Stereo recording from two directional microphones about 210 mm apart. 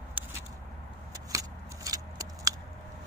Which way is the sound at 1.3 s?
15° right (ahead or behind).